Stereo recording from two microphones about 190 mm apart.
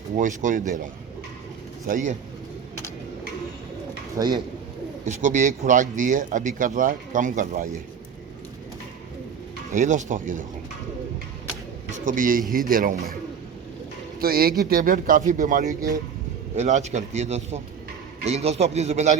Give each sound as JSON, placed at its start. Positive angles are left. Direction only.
{"t": 0.2, "sound": "a man's voice", "side_deg": -45}
{"t": 1.9, "sound": "speech", "side_deg": -40}
{"t": 4.1, "sound": "speech", "side_deg": -20}
{"t": 5.0, "sound": "a man's voice", "side_deg": -40}
{"t": 9.7, "sound": "a man's voice", "side_deg": -40}
{"t": 11.9, "sound": "a man's voice", "side_deg": -40}
{"t": 14.2, "sound": "a man's voice", "side_deg": -50}